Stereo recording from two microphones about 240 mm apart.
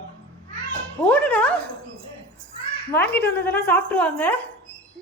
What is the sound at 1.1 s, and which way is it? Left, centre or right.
Speech, centre.